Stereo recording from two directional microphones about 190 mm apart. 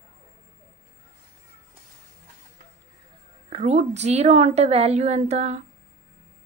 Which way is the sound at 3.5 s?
35° right (ahead or behind).